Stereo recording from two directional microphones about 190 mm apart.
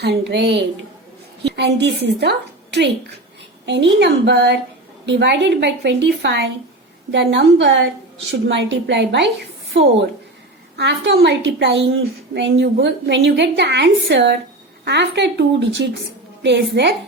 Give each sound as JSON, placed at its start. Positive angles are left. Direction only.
{"t": 0.0, "sound": "a woman's voice", "side_deg": -60}